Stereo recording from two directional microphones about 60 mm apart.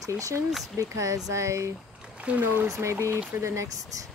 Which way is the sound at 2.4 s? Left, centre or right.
Right.